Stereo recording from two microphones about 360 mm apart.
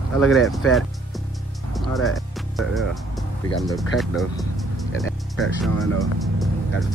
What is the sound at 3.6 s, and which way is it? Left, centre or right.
Speech, centre.